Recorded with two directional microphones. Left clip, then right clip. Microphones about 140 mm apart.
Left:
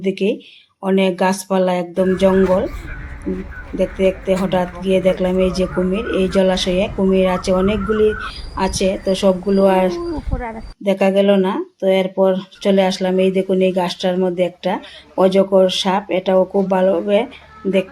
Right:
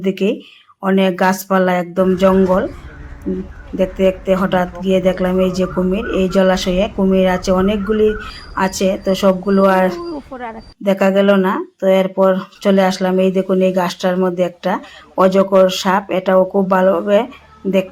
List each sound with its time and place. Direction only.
0.0 s speech: centre (ahead or behind)
3.8 s a man's voice: centre (ahead or behind)
17.6 s a man's voice: 15° left (ahead or behind)